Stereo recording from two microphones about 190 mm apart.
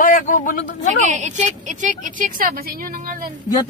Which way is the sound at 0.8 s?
40° right (ahead or behind).